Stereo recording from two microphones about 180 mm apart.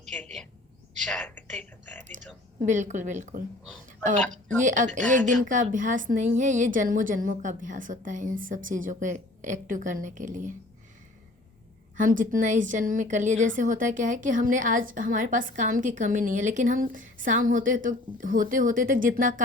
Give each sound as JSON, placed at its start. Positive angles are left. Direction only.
{"t": 0.0, "sound": "a sound", "side_deg": 5}
{"t": 1.0, "sound": "whispering", "side_deg": 5}
{"t": 2.0, "sound": "a woman's voice", "side_deg": -45}
{"t": 11.9, "sound": "a woman's voice", "side_deg": -45}